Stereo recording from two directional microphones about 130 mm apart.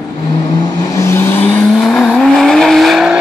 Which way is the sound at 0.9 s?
20° left (ahead or behind).